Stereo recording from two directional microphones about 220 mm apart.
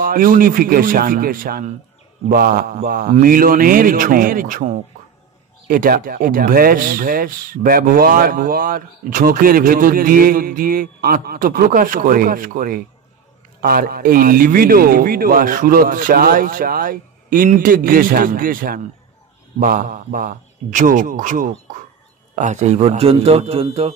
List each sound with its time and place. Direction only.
0.0 s a man's voice: 40° right (ahead or behind)